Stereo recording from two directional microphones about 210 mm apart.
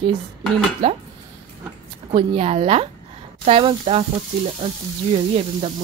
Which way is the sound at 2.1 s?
30° right (ahead or behind).